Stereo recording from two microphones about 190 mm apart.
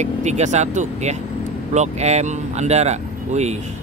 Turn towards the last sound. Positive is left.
turn(degrees=-35)  # may be behind; listen again after turning